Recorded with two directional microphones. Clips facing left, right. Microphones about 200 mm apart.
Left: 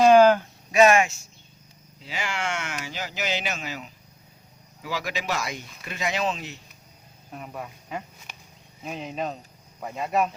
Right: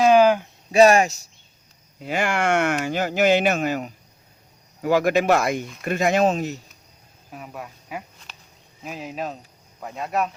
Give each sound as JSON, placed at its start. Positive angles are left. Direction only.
{"t": 0.0, "sound": "a sound", "side_deg": -10}
{"t": 0.7, "sound": "speech", "side_deg": -35}
{"t": 2.0, "sound": "speech", "side_deg": -55}
{"t": 7.3, "sound": "speech", "side_deg": 0}